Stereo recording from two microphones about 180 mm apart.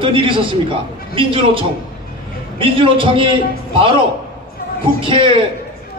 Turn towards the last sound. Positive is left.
turn(degrees=-30)  # may be behind; listen again after turning